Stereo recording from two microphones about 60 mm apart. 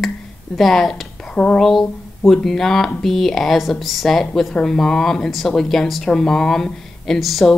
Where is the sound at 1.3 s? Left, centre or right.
Centre.